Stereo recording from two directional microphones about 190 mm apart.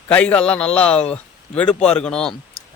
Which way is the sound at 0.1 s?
5° left (ahead or behind).